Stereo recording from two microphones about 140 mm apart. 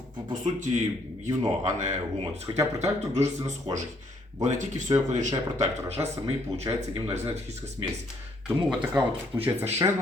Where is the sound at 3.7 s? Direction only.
35° right (ahead or behind).